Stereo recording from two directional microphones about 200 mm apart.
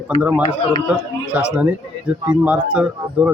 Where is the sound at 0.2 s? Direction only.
10° right (ahead or behind).